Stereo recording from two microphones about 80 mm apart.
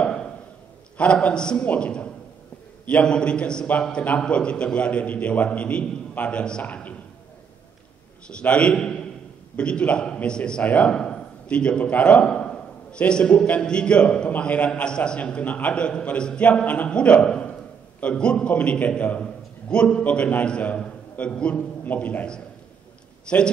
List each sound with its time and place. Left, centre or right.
0.0 s a sound: centre
0.9 s a man's voice: centre
8.3 s a man's voice: centre